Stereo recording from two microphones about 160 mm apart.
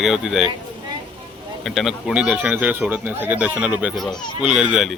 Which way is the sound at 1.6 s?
Centre (ahead or behind).